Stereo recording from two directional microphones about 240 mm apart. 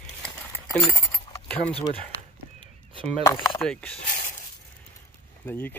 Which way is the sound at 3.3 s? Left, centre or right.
Centre.